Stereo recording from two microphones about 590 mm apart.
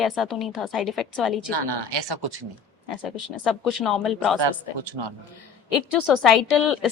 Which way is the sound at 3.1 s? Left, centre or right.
Left.